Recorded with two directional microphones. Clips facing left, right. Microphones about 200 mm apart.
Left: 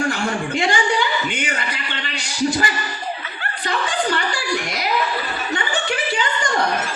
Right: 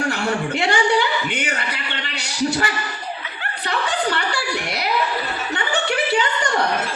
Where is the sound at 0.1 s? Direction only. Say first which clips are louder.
Even; 65° right (ahead or behind).